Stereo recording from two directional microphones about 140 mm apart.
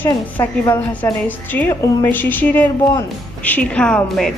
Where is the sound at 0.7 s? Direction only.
10° left (ahead or behind).